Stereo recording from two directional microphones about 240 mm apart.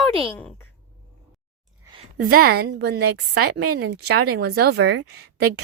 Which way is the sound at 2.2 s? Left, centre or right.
Right.